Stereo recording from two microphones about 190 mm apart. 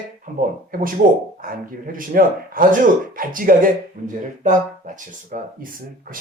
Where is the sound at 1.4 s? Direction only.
45° right (ahead or behind).